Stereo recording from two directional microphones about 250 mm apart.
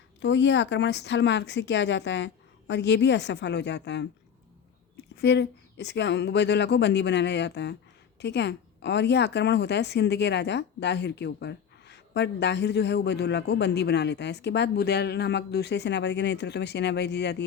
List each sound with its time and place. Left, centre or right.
0.2 s speech: left
5.1 s speech: left